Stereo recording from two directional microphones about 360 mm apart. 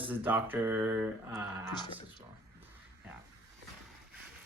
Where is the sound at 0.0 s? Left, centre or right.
Centre.